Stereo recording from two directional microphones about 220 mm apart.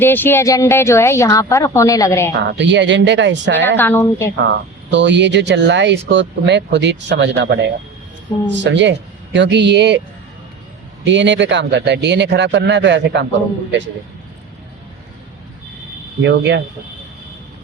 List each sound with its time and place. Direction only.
0.0 s a woman's voice: 10° left (ahead or behind)
2.3 s speech: 50° right (ahead or behind)
3.8 s a woman's voice: 10° left (ahead or behind)
4.4 s speech: 55° right (ahead or behind)
11.0 s speech: 55° right (ahead or behind)
16.2 s speech: 50° right (ahead or behind)